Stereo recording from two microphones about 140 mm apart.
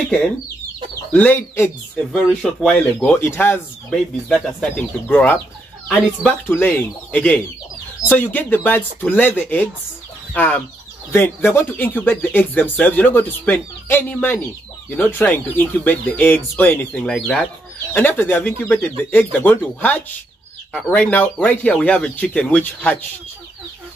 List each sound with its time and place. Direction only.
1.1 s speech: 10° left (ahead or behind)
2.0 s speech: centre (ahead or behind)
3.1 s speech: 15° left (ahead or behind)
3.9 s speech: centre (ahead or behind)
6.5 s speech: 10° left (ahead or behind)